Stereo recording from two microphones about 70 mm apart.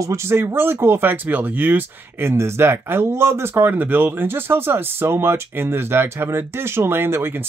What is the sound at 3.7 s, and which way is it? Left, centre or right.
Speech, right.